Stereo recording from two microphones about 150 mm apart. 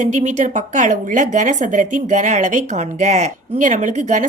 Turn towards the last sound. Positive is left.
turn(degrees=-55)  # may be behind; listen again after turning